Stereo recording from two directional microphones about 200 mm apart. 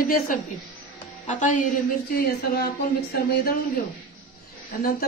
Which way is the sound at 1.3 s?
40° left (ahead or behind).